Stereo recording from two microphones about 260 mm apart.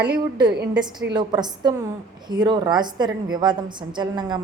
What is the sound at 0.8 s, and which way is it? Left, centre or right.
A woman's voice, centre.